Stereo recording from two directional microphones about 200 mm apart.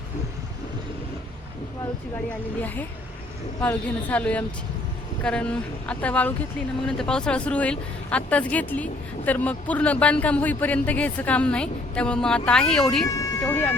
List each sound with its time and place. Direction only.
2.6 s speech: 10° left (ahead or behind)
13.1 s speech: 15° left (ahead or behind)